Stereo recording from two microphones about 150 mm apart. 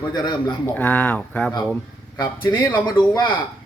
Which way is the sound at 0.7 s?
10° left (ahead or behind).